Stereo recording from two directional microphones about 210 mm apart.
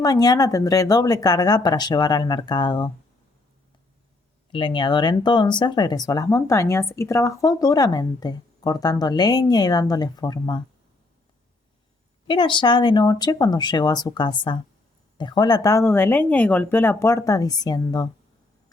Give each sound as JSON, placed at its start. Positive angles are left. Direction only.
{"t": 0.0, "sound": "speech", "side_deg": 15}
{"t": 4.5, "sound": "speech", "side_deg": 25}
{"t": 12.3, "sound": "speech", "side_deg": 20}